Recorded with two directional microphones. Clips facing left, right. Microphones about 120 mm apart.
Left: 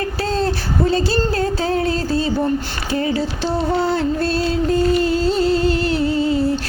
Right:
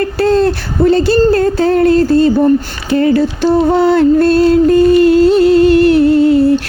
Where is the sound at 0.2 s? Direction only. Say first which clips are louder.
Right 11 dB; 60° right (ahead or behind).